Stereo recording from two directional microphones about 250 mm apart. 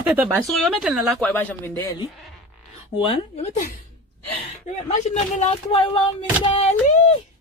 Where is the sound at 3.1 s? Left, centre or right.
Left.